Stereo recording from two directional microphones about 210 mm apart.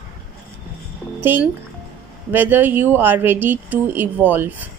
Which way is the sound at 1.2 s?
10° right (ahead or behind).